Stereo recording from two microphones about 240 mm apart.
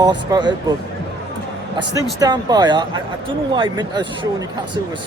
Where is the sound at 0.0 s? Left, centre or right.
Centre.